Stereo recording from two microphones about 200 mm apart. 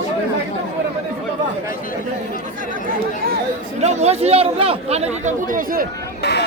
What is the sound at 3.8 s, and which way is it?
Speech, 35° right (ahead or behind).